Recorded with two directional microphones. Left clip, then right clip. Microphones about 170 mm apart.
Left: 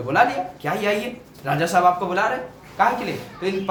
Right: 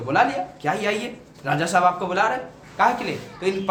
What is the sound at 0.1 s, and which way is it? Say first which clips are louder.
Speech: left 1 dB; 20° right (ahead or behind).